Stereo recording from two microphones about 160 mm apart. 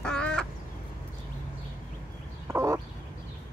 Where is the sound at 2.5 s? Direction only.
20° right (ahead or behind).